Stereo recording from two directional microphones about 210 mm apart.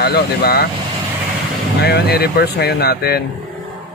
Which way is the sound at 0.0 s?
50° left (ahead or behind).